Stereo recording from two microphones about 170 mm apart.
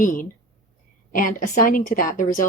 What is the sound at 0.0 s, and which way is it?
Speech, 55° left (ahead or behind).